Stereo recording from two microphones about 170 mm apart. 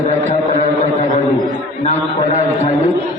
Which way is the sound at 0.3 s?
40° left (ahead or behind).